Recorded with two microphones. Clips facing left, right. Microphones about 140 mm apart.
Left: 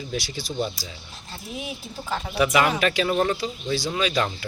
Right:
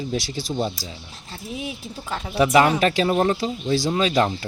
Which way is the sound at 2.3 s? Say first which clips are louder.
Right 4 dB; 30° right (ahead or behind).